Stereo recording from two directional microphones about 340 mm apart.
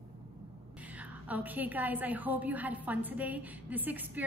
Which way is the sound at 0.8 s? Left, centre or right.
Centre.